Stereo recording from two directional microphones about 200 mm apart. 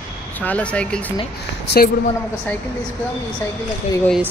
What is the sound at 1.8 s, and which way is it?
Speech, 45° left (ahead or behind).